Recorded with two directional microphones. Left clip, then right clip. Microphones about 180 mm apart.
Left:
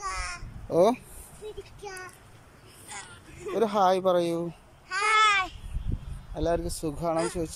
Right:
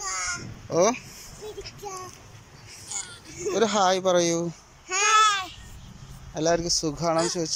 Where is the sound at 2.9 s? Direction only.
5° right (ahead or behind).